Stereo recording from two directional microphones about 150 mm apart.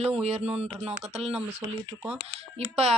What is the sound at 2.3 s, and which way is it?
Speech, 40° right (ahead or behind).